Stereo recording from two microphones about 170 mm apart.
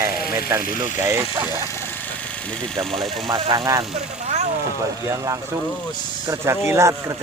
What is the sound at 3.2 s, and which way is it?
Speech, 20° right (ahead or behind).